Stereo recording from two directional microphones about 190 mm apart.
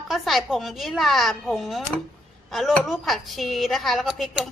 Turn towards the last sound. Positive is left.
turn(degrees=0)  # may be behind; listen again after turning